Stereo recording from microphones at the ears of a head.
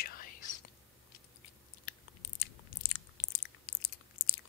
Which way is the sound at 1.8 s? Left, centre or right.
Left.